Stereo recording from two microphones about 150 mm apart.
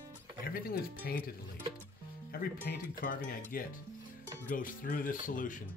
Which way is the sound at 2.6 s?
70° left (ahead or behind).